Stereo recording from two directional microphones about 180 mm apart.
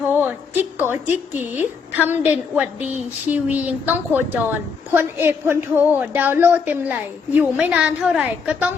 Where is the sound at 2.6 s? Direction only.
10° right (ahead or behind).